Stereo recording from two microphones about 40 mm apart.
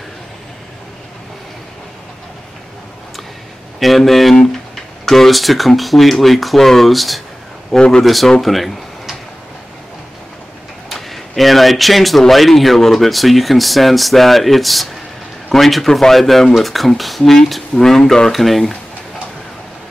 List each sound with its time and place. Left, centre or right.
3.8 s speech: centre
7.7 s a man's voice: left
8.0 s speech: centre
10.9 s speech: centre
18.3 s speech: centre